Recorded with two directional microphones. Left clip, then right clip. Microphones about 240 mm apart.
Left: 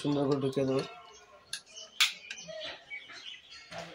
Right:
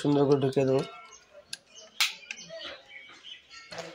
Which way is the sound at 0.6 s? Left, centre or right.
Right.